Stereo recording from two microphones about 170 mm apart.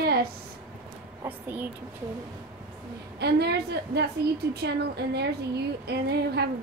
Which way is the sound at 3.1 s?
75° right (ahead or behind).